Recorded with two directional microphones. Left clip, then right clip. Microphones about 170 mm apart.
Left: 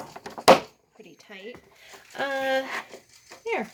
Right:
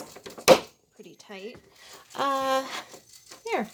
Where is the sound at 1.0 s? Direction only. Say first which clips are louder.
Right 1 dB; 30° right (ahead or behind).